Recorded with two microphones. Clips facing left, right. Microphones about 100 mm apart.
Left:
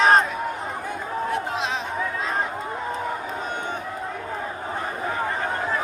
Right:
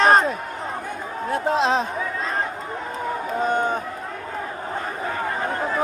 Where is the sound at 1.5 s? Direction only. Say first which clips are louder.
Right 7 dB; 35° right (ahead or behind).